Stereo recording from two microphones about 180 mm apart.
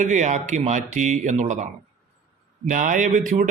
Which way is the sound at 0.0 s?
40° right (ahead or behind).